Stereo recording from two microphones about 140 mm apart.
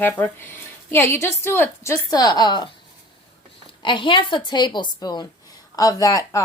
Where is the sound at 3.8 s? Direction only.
35° left (ahead or behind).